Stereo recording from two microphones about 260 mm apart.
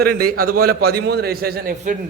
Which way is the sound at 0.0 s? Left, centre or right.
Right.